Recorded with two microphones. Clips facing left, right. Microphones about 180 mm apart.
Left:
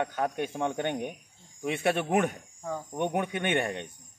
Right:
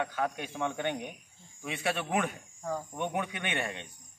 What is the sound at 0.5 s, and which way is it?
Speech, 20° left (ahead or behind).